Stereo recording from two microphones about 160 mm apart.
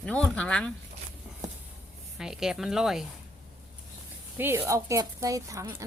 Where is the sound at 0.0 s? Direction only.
5° left (ahead or behind).